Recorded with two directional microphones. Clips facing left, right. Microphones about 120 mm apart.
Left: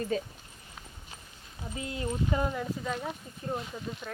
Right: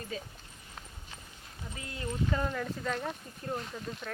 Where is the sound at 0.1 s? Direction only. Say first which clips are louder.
Left 8 dB; 40° left (ahead or behind).